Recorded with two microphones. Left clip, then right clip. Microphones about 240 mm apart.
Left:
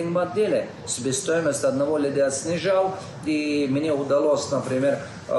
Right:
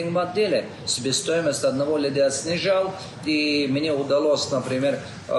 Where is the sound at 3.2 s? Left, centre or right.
Centre.